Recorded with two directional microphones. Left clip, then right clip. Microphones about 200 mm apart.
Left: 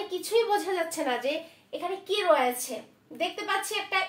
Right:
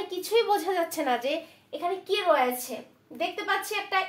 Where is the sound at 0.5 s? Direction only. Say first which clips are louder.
Right 2 dB; 30° right (ahead or behind).